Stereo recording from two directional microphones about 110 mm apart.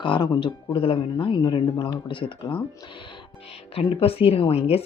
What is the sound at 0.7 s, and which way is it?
Speech, 55° left (ahead or behind).